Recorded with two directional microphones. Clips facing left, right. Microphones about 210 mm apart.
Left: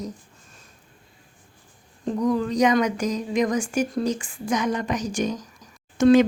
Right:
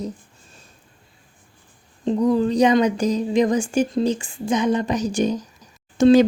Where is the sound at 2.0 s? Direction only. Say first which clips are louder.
Right 4 dB; 25° right (ahead or behind).